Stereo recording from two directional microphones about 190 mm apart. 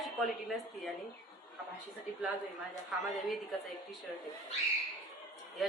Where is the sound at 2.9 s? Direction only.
Centre (ahead or behind).